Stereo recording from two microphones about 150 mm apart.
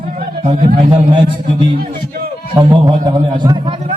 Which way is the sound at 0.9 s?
35° right (ahead or behind).